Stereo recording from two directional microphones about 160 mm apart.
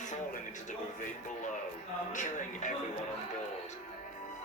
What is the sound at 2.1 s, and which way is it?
Music, 50° left (ahead or behind).